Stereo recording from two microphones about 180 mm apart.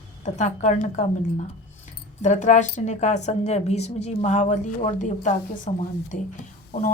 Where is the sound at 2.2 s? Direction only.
40° left (ahead or behind).